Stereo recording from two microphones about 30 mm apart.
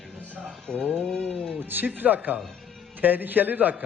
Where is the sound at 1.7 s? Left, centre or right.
Right.